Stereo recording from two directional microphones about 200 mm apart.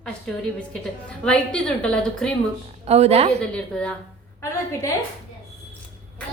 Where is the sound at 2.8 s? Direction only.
30° right (ahead or behind).